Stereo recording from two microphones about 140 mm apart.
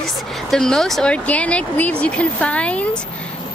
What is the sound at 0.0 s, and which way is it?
Speech, centre (ahead or behind).